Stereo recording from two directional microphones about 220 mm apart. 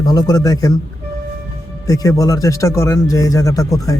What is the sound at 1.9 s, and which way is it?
Speech, 15° left (ahead or behind).